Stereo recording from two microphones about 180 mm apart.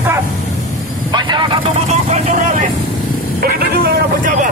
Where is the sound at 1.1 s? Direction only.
25° right (ahead or behind).